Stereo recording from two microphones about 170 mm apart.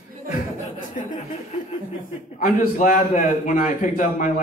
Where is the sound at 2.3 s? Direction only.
50° left (ahead or behind).